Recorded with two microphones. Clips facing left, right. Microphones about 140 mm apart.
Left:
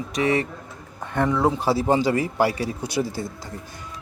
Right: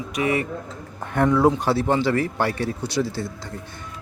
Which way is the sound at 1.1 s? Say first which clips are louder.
Right 3 dB; centre (ahead or behind).